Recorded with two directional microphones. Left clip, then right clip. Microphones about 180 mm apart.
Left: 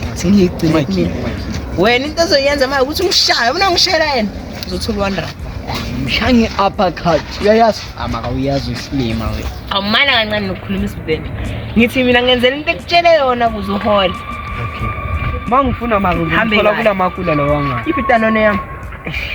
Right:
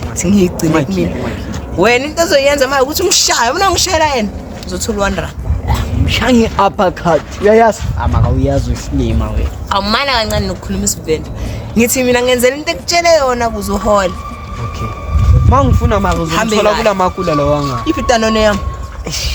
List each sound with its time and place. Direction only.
0.2 s speech: centre (ahead or behind)
0.7 s a woman's voice: 15° right (ahead or behind)
1.8 s a woman's voice: 5° right (ahead or behind)
6.1 s speech: 30° right (ahead or behind)
9.6 s a woman's voice: 10° right (ahead or behind)
11.8 s a woman's voice: 10° right (ahead or behind)
15.4 s a woman's voice: 20° right (ahead or behind)